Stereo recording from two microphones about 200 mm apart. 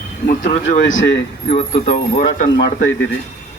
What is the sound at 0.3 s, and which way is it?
Speech, 40° left (ahead or behind).